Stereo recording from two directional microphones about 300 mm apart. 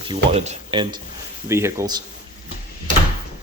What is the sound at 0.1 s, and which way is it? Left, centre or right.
Speech, centre.